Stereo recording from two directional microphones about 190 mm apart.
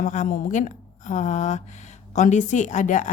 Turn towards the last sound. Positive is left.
turn(degrees=40)  # may be behind; listen again after turning